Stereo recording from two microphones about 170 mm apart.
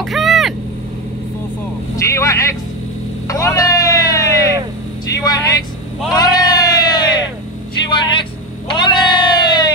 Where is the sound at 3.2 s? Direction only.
20° left (ahead or behind).